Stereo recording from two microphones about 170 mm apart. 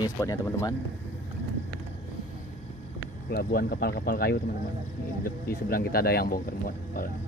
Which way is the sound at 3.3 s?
60° left (ahead or behind).